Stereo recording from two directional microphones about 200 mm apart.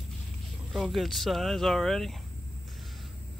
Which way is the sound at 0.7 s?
Centre (ahead or behind).